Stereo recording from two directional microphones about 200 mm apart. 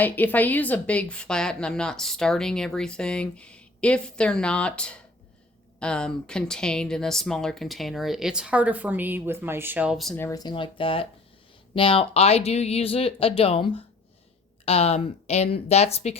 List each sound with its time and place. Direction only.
0.0 s speech: 10° left (ahead or behind)
10.2 s speech: 15° left (ahead or behind); by 16.1 s 30° left (ahead or behind)